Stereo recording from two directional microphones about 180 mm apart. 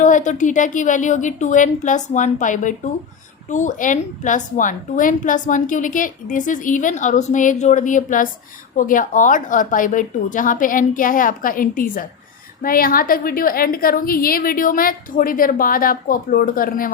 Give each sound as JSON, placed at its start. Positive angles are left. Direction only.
{"t": 0.0, "sound": "a woman's voice", "side_deg": 45}